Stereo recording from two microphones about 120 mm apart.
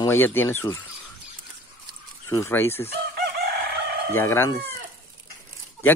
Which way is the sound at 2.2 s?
20° left (ahead or behind).